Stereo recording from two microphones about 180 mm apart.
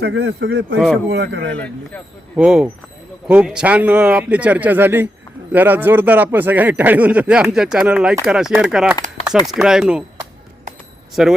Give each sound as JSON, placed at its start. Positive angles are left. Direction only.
{"t": 0.0, "sound": "speech", "side_deg": -70}
{"t": 1.5, "sound": "speech", "side_deg": 5}
{"t": 2.3, "sound": "speech", "side_deg": -5}
{"t": 11.1, "sound": "speech", "side_deg": 0}